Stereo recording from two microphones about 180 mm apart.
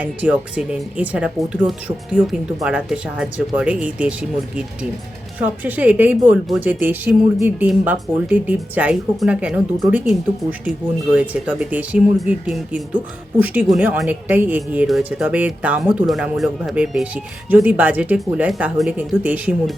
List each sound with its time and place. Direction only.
0.0 s speech: 5° right (ahead or behind)